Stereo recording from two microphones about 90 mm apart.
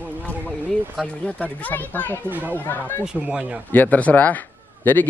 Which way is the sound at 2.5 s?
20° left (ahead or behind).